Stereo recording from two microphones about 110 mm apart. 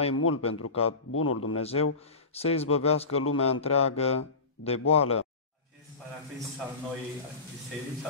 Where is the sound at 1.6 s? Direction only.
65° left (ahead or behind).